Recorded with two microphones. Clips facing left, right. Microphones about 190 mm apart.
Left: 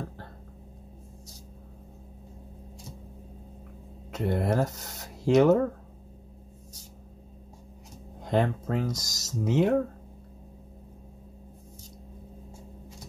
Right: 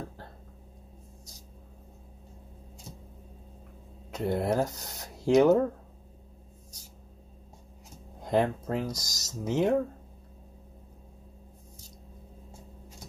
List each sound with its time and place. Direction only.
4.2 s speech: centre (ahead or behind)
8.2 s speech: centre (ahead or behind)